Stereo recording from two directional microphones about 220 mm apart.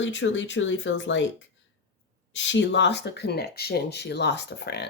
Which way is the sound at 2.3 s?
55° left (ahead or behind).